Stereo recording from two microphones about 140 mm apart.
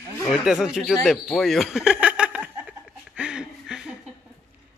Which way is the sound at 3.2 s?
5° right (ahead or behind).